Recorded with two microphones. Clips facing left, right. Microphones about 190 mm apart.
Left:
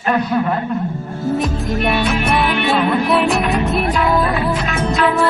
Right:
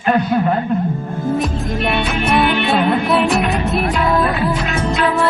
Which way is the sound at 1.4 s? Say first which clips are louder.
Left 1 dB; centre (ahead or behind).